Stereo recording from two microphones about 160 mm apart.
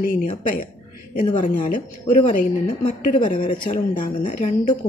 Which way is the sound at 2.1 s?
50° left (ahead or behind).